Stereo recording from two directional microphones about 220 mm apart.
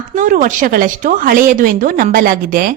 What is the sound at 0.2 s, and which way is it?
A woman's voice, 35° right (ahead or behind).